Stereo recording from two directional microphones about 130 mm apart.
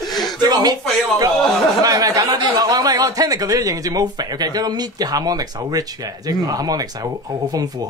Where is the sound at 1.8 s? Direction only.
30° right (ahead or behind).